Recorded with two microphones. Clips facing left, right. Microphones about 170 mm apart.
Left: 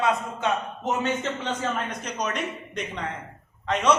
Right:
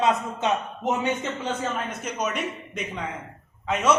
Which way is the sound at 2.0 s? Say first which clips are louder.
Right 1 dB; 10° right (ahead or behind).